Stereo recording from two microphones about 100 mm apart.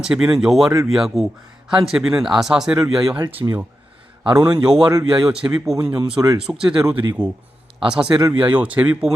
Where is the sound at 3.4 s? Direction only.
35° right (ahead or behind).